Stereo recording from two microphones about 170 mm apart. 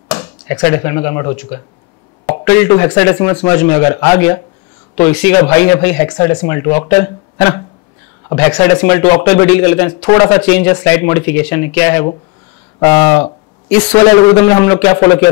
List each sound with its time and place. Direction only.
0.1 s chop: 25° left (ahead or behind)
0.6 s speech: 15° left (ahead or behind)
13.7 s a man's voice: 10° left (ahead or behind)
13.9 s speech: 20° left (ahead or behind)